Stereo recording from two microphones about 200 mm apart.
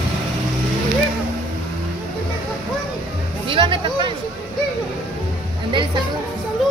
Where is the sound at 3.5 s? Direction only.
25° right (ahead or behind).